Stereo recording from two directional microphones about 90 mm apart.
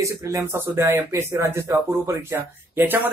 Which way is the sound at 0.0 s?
35° right (ahead or behind).